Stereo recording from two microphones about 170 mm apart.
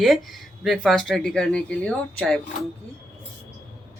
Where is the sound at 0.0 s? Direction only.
Centre (ahead or behind).